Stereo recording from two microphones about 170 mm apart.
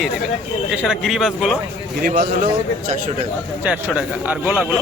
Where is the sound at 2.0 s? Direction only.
55° right (ahead or behind).